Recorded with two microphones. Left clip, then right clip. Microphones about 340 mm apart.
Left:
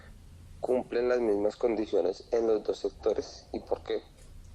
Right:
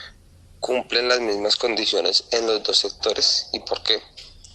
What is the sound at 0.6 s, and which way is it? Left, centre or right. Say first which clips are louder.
Speech: right 7 dB; right.